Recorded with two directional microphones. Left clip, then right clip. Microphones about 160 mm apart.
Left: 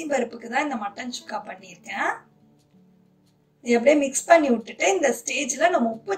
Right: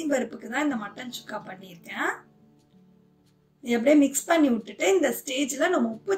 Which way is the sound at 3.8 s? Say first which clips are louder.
Even; 50° right (ahead or behind).